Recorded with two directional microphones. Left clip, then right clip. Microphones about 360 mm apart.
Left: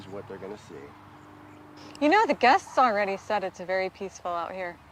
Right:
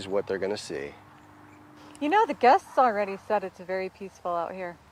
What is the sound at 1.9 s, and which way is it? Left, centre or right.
Speech, centre.